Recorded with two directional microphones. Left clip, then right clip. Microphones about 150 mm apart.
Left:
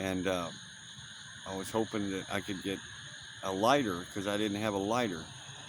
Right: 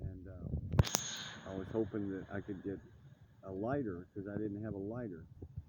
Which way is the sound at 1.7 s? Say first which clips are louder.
Left 5 dB; 40° left (ahead or behind).